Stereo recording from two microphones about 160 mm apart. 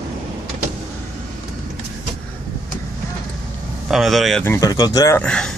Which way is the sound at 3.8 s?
Centre (ahead or behind).